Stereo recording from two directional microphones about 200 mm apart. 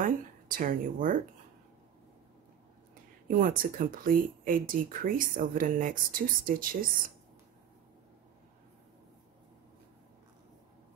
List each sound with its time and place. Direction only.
0.0 s speech: 45° right (ahead or behind)
3.3 s speech: 45° right (ahead or behind)